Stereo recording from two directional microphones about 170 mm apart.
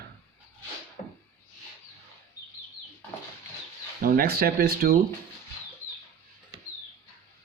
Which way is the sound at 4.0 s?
55° right (ahead or behind).